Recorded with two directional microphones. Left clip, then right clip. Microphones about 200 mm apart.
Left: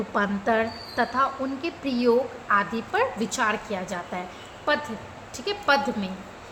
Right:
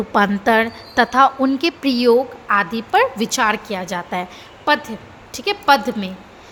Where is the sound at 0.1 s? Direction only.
40° right (ahead or behind).